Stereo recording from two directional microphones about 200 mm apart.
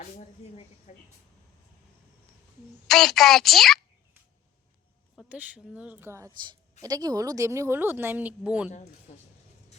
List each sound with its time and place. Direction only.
0.0 s speech: 35° left (ahead or behind)
2.8 s a woman's voice: centre (ahead or behind)
5.1 s speech: 5° right (ahead or behind)